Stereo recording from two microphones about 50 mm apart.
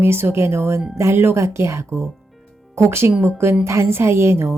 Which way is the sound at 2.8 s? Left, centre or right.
Right.